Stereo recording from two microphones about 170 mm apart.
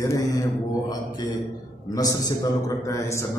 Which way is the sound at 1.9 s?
20° left (ahead or behind).